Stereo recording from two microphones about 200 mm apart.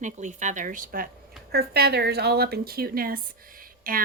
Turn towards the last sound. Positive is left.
turn(degrees=-45)  # may be behind; listen again after turning